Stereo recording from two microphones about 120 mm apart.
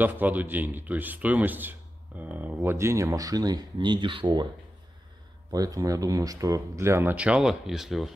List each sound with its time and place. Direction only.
0.0 s a man's voice: 15° right (ahead or behind); by 4.5 s 40° right (ahead or behind)
5.5 s speech: 30° right (ahead or behind); by 8.1 s 5° right (ahead or behind)